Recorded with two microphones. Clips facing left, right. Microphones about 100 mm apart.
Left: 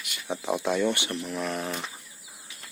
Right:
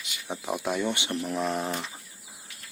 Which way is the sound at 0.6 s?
10° right (ahead or behind).